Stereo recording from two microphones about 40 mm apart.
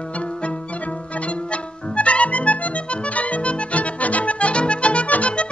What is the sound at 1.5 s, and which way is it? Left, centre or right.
Music, left.